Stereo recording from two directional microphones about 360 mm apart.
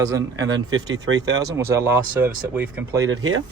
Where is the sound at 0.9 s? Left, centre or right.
Right.